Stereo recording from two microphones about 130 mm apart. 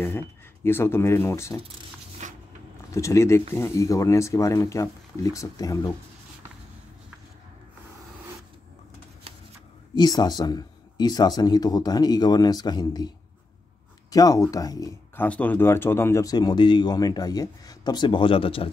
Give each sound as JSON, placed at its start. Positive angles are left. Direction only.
{"t": 0.7, "sound": "speech", "side_deg": 20}
{"t": 2.2, "sound": "a sound", "side_deg": -65}
{"t": 2.9, "sound": "speech", "side_deg": 25}
{"t": 9.9, "sound": "speech", "side_deg": 30}
{"t": 14.1, "sound": "speech", "side_deg": 30}
{"t": 15.1, "sound": "speech", "side_deg": 10}